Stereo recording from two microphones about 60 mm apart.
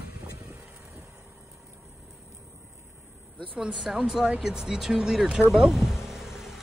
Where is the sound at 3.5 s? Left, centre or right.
Centre.